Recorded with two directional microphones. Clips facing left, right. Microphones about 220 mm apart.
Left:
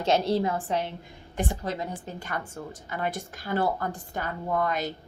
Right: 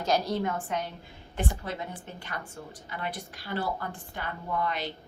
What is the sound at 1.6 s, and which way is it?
A woman's voice, 40° left (ahead or behind).